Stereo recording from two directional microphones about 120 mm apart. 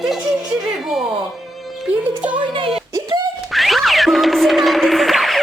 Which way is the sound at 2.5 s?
50° right (ahead or behind).